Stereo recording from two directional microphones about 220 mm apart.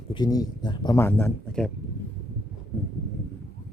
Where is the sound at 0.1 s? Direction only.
20° left (ahead or behind).